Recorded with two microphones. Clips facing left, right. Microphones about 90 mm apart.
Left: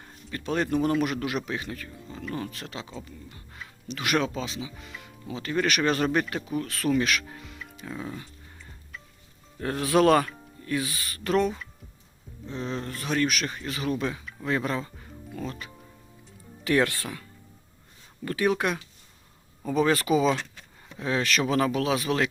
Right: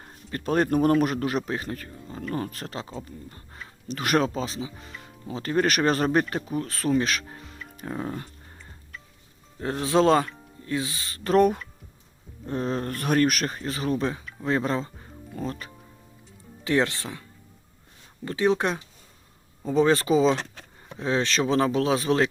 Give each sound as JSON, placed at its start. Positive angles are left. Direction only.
{"t": 0.0, "sound": "speech", "side_deg": -40}
{"t": 9.6, "sound": "speech", "side_deg": -25}
{"t": 12.5, "sound": "speech", "side_deg": -45}
{"t": 16.6, "sound": "speech", "side_deg": -20}
{"t": 18.3, "sound": "speech", "side_deg": -25}